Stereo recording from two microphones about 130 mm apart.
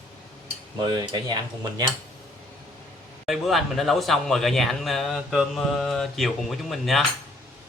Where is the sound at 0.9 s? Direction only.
35° right (ahead or behind).